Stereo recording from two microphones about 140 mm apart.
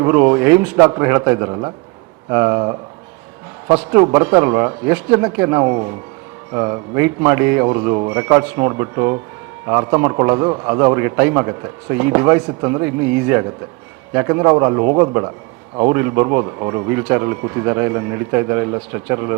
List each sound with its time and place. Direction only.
0.0 s a man's voice: 15° right (ahead or behind)